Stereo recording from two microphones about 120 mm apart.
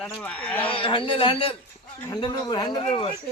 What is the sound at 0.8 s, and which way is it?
Speech, 45° left (ahead or behind).